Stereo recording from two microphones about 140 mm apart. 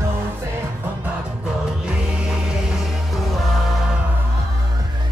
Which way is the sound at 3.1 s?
Centre (ahead or behind).